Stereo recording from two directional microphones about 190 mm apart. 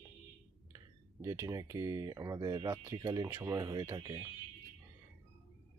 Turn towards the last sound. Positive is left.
turn(degrees=-20)  # may be behind; listen again after turning